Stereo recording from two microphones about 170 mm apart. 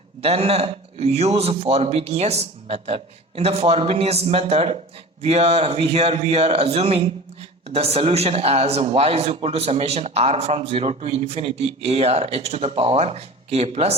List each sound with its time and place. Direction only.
0.2 s a man's voice: 35° right (ahead or behind)